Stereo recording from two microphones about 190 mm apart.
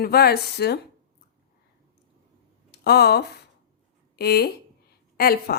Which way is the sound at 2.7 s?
60° left (ahead or behind).